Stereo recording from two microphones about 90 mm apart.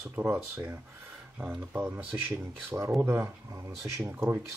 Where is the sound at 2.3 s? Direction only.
25° right (ahead or behind).